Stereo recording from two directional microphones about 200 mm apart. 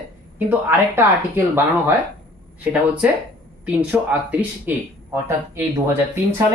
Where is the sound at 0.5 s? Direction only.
10° right (ahead or behind).